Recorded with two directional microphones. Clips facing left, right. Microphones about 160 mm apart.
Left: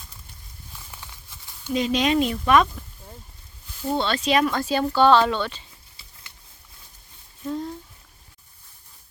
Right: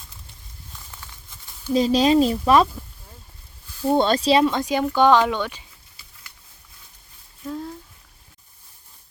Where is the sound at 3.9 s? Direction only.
40° right (ahead or behind); by 5.7 s 10° right (ahead or behind).